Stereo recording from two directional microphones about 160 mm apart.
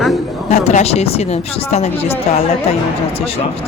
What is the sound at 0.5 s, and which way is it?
Speech, 45° left (ahead or behind).